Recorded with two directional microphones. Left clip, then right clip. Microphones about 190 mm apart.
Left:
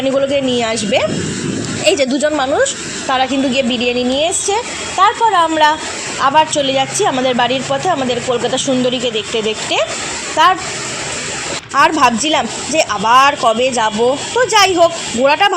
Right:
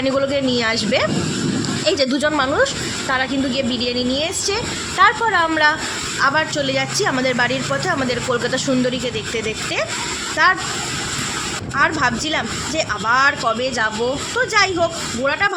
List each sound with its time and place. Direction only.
0.2 s a woman's voice: 10° left (ahead or behind)
10.4 s speech: 20° left (ahead or behind)
11.8 s speech: 30° left (ahead or behind)